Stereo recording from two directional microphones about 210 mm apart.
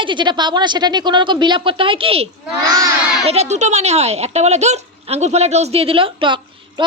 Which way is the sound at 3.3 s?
30° right (ahead or behind).